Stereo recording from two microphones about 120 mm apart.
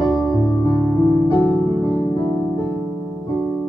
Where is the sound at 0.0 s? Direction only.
40° left (ahead or behind).